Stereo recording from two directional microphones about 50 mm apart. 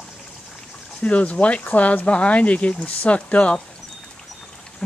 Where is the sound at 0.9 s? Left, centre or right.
Left.